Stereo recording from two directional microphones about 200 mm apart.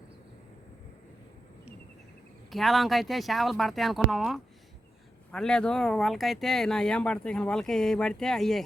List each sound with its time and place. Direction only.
2.5 s speech: centre (ahead or behind)